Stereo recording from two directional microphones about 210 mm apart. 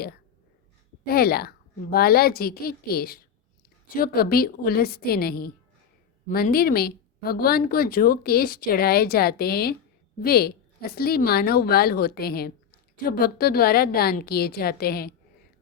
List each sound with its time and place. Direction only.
1.0 s speech: 45° left (ahead or behind)